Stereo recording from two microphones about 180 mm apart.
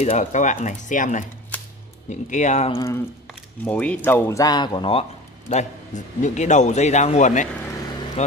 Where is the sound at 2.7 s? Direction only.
15° left (ahead or behind).